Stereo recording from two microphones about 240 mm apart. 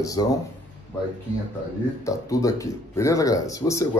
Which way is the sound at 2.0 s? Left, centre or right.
Centre.